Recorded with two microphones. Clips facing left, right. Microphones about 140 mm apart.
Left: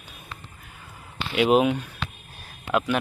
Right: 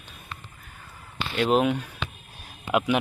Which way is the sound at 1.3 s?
10° left (ahead or behind).